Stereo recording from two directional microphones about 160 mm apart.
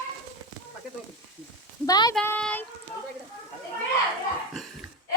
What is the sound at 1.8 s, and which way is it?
Speech, 25° left (ahead or behind).